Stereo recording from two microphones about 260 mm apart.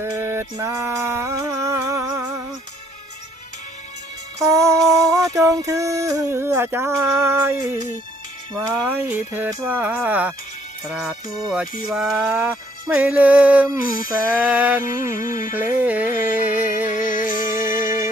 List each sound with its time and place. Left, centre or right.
0.0 s music: centre
4.4 s a sound: centre
4.8 s music: centre
5.1 s a sound: centre
10.8 s music: centre
11.3 s a sound: centre
11.9 s music: centre
13.9 s music: left
14.4 s music: centre
15.2 s music: left
15.5 s music: centre
16.9 s music: left